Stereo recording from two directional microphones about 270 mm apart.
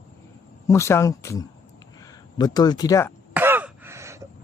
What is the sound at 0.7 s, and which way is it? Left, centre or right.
Speech, centre.